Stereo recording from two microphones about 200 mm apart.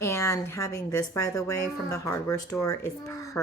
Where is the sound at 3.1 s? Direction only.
15° left (ahead or behind).